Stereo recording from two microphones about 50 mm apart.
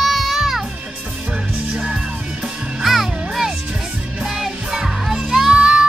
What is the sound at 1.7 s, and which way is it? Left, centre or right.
Music, centre.